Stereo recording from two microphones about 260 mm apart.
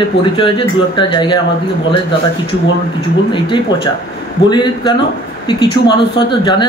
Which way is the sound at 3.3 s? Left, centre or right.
Centre.